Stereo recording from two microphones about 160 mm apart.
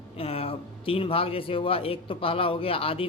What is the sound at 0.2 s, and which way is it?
A man's voice, 35° left (ahead or behind).